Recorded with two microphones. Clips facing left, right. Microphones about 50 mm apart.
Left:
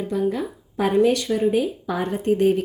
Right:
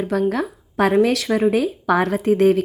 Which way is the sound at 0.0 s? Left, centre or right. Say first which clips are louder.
Right 3 dB; right.